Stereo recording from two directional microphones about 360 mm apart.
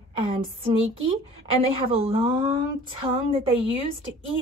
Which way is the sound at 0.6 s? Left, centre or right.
Centre.